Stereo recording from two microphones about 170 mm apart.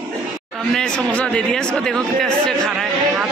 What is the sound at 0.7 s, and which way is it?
Speech, 5° left (ahead or behind).